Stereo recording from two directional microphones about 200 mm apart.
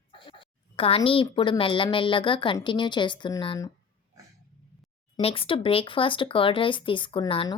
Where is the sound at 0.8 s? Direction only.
30° left (ahead or behind).